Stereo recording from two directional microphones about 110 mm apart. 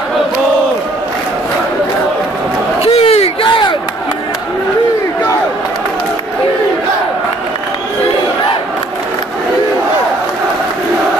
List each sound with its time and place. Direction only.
2.8 s battle cry: 65° left (ahead or behind)
3.4 s battle cry: 45° left (ahead or behind)